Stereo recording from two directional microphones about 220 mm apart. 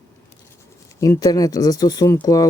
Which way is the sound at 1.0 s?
15° left (ahead or behind).